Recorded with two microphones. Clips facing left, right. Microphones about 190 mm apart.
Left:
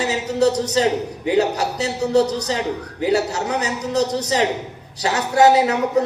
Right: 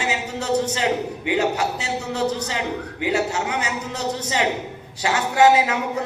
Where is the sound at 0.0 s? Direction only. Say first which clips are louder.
Left 8 dB; 40° left (ahead or behind).